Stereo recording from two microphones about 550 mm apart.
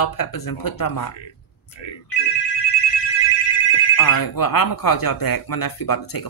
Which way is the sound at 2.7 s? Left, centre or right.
Left.